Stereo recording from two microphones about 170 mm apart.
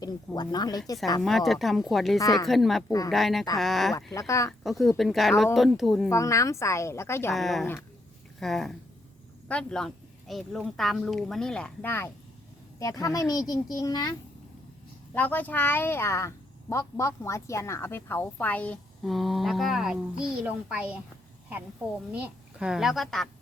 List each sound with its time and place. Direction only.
0.0 s speech: 25° left (ahead or behind)
1.2 s speech: centre (ahead or behind)
2.1 s speech: 20° left (ahead or behind)
2.5 s speech: centre (ahead or behind)
3.9 s speech: 20° left (ahead or behind)
4.6 s speech: centre (ahead or behind)
6.1 s speech: 15° left (ahead or behind)
7.3 s speech: centre (ahead or behind); by 14.2 s 25° left (ahead or behind)
15.1 s speech: 10° left (ahead or behind); by 21.0 s 5° right (ahead or behind)
22.1 s speech: 5° right (ahead or behind)